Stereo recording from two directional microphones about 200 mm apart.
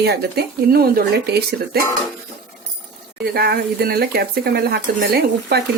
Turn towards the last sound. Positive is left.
turn(degrees=-55)  # may be behind; listen again after turning